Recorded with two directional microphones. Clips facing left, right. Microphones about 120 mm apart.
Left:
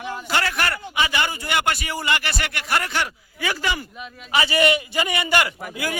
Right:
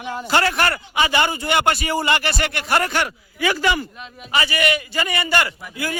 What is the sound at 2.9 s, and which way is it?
Speech, 55° right (ahead or behind).